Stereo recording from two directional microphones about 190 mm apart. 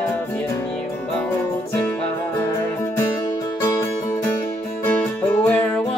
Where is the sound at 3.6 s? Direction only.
15° left (ahead or behind).